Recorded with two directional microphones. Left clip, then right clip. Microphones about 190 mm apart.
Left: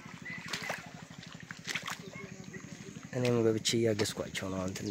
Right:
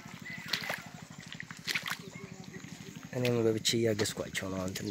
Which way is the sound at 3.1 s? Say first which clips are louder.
Even; 5° left (ahead or behind).